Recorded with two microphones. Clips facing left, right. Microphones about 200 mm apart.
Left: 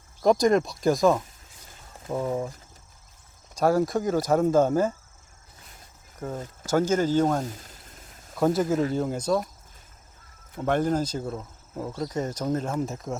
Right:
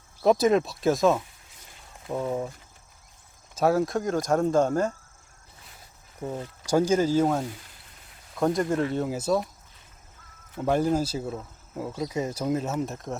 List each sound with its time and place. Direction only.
0.2 s speech: 5° right (ahead or behind)
3.5 s speech: centre (ahead or behind)
6.2 s speech: 10° right (ahead or behind)
7.4 s speech: 40° left (ahead or behind)
8.4 s speech: centre (ahead or behind)
10.6 s speech: 10° right (ahead or behind)